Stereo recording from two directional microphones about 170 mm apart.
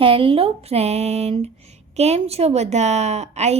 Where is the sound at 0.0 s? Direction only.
30° right (ahead or behind).